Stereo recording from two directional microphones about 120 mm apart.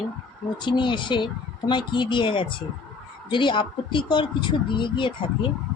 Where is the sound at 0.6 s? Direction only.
40° left (ahead or behind).